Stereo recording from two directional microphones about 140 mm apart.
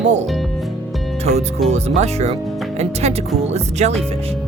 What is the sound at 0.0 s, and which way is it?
Speech, 55° right (ahead or behind).